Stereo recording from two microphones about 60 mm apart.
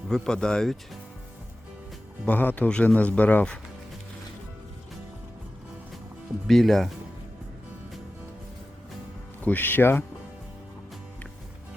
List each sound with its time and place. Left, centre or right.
0.1 s speech: centre
2.2 s speech: left
6.5 s speech: centre
9.4 s speech: left